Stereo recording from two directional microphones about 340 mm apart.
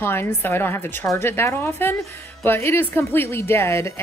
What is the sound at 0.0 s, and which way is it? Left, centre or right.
A woman's voice, centre.